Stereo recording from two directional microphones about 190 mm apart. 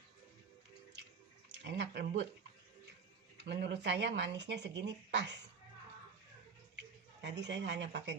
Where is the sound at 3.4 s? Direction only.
65° right (ahead or behind).